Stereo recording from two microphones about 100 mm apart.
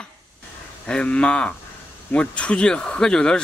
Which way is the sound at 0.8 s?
10° left (ahead or behind).